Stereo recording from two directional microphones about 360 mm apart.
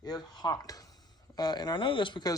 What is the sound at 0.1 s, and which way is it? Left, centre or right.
Speech, centre.